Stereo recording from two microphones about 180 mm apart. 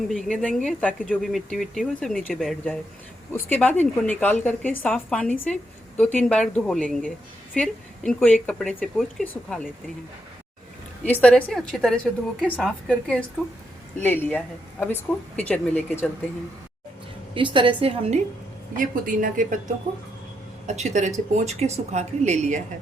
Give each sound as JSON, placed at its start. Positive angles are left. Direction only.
{"t": 0.1, "sound": "a woman's voice", "side_deg": 0}
{"t": 11.0, "sound": "a woman's voice", "side_deg": 10}
{"t": 17.3, "sound": "a woman's voice", "side_deg": -25}
{"t": 18.8, "sound": "a woman's voice", "side_deg": -50}